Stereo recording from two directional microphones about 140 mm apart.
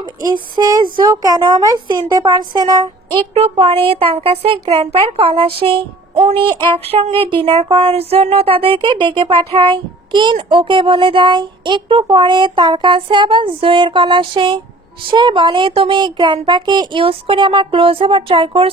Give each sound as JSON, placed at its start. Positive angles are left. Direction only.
{"t": 0.0, "sound": "a woman's voice", "side_deg": -30}
{"t": 3.3, "sound": "speech", "side_deg": -40}
{"t": 6.1, "sound": "a sound", "side_deg": -40}
{"t": 7.7, "sound": "speech", "side_deg": -45}